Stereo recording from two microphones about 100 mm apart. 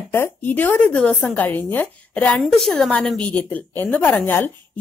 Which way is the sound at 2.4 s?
Centre (ahead or behind).